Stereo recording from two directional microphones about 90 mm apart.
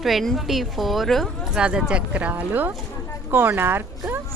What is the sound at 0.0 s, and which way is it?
A woman's voice, centre (ahead or behind).